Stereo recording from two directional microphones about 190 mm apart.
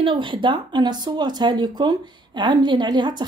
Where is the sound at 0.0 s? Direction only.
25° right (ahead or behind).